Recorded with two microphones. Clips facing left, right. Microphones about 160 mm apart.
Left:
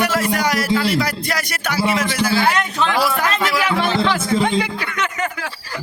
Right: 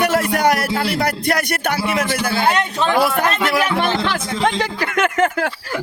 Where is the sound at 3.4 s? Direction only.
55° right (ahead or behind).